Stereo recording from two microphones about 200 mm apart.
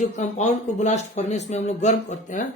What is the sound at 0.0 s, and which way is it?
Speech, 35° left (ahead or behind).